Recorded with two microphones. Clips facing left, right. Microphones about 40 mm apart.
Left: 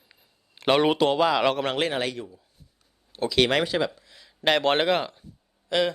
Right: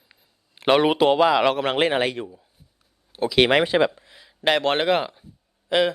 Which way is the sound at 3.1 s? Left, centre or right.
Centre.